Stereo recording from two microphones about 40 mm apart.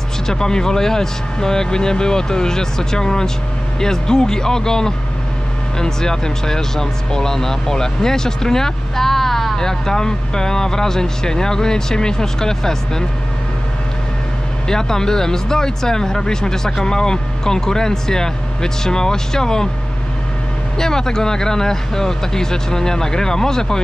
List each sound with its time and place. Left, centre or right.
0.3 s speech: centre
14.7 s speech: centre
20.7 s speech: centre